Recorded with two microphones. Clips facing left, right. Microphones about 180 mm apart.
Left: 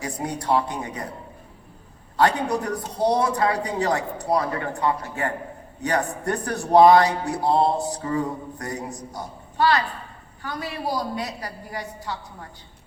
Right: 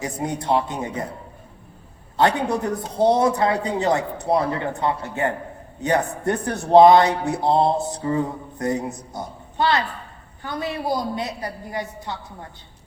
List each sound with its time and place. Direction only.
0.0 s speech: 20° right (ahead or behind)
3.0 s speech: 25° right (ahead or behind)